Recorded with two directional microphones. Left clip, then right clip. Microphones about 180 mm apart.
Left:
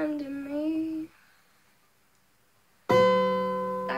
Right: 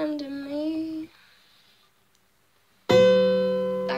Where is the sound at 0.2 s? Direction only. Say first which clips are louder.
Right 2 dB; 5° left (ahead or behind).